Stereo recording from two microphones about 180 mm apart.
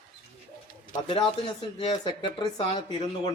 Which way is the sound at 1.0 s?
30° left (ahead or behind).